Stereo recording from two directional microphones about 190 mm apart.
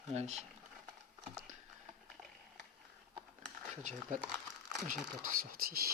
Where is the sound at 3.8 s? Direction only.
40° right (ahead or behind).